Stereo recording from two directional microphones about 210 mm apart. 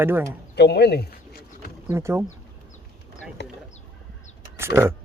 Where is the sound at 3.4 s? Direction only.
55° left (ahead or behind).